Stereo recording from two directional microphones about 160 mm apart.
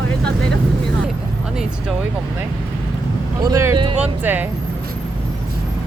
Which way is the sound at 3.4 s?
20° right (ahead or behind).